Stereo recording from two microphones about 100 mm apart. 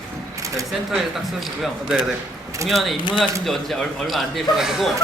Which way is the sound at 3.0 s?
55° left (ahead or behind).